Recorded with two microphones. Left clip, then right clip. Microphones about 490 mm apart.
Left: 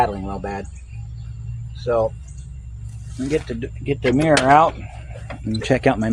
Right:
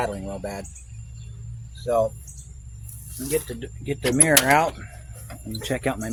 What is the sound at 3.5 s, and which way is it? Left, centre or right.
A man's voice, right.